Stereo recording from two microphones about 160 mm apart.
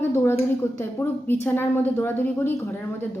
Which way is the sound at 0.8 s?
15° left (ahead or behind).